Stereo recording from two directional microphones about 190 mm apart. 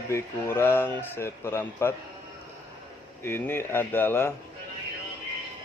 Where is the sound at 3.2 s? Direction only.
10° left (ahead or behind).